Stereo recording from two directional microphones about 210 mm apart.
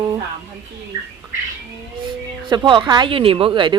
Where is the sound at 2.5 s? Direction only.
20° right (ahead or behind).